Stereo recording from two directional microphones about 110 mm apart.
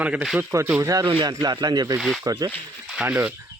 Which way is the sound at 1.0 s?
45° right (ahead or behind).